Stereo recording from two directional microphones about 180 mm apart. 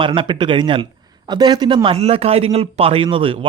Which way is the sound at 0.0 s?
30° right (ahead or behind).